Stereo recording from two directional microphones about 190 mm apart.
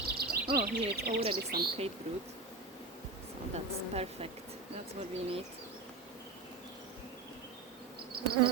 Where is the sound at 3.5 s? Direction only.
30° right (ahead or behind).